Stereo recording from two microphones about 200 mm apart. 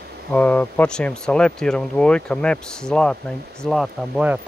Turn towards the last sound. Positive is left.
turn(degrees=-5)  # may be behind; listen again after turning